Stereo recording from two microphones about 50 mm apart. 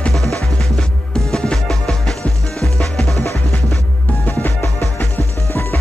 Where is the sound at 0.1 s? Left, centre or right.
Centre.